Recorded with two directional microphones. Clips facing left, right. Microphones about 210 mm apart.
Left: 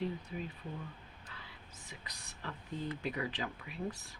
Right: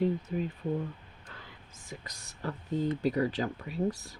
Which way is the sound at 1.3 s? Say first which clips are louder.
Right 5 dB; 45° right (ahead or behind).